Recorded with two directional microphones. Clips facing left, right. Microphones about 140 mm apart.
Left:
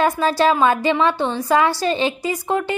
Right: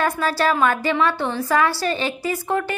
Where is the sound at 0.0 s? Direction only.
20° left (ahead or behind).